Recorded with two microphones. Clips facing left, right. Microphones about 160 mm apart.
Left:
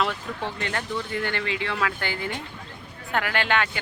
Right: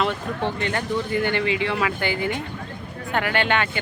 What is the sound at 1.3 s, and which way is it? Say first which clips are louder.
Speech: right 6 dB; 10° right (ahead or behind).